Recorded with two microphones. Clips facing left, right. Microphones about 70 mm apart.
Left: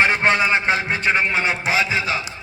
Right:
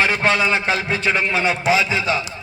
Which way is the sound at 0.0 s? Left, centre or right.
Left.